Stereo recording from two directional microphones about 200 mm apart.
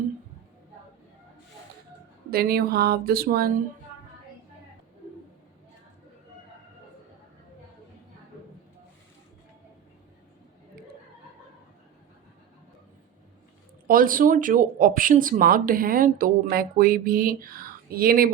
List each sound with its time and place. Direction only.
2.3 s speech: 50° right (ahead or behind)
13.8 s speech: 45° right (ahead or behind)